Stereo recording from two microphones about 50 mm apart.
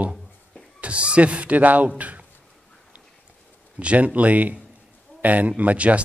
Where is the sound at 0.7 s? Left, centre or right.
Right.